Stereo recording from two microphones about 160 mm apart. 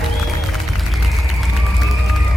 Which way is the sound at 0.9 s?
Centre (ahead or behind).